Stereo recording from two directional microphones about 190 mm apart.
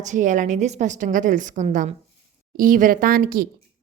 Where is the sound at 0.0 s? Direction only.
40° right (ahead or behind).